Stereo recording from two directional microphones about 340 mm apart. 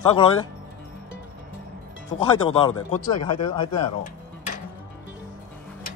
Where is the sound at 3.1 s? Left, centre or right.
Left.